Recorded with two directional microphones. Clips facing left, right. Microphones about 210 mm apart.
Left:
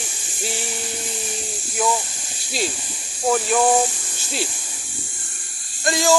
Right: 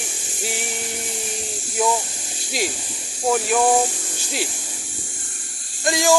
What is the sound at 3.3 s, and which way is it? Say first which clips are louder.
Speech: even; 5° right (ahead or behind).